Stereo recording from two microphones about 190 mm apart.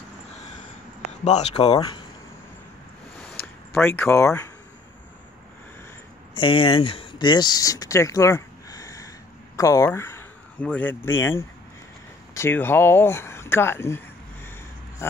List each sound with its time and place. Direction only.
1.2 s speech: 35° left (ahead or behind)
1.5 s speech: 25° left (ahead or behind)
3.7 s speech: 10° left (ahead or behind)
6.3 s speech: 25° left (ahead or behind); by 14.5 s 10° left (ahead or behind)